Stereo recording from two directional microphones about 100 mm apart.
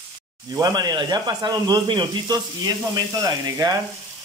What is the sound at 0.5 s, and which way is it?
Speech, 40° right (ahead or behind).